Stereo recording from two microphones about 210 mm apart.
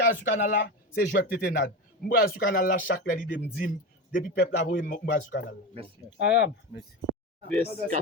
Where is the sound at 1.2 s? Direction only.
45° left (ahead or behind).